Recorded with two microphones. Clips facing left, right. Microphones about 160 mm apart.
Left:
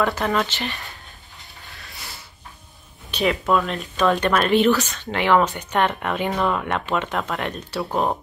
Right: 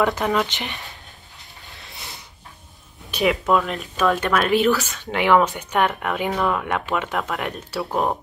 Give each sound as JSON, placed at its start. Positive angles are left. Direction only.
{"t": 0.0, "sound": "speech", "side_deg": -20}
{"t": 1.7, "sound": "mechanisms", "side_deg": -20}
{"t": 3.1, "sound": "speech", "side_deg": -10}